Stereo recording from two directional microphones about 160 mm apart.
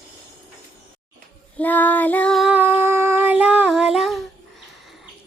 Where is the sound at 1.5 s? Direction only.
10° left (ahead or behind).